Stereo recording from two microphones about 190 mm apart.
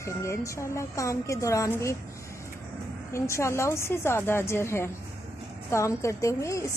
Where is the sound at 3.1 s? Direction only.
15° left (ahead or behind).